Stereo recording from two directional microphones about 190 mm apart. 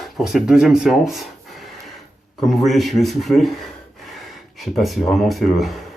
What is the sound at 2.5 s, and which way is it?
Speech, centre (ahead or behind).